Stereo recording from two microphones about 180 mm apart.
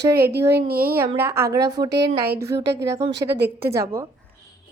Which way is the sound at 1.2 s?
15° right (ahead or behind).